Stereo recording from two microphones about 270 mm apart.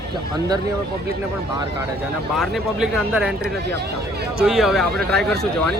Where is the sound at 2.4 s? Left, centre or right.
Centre.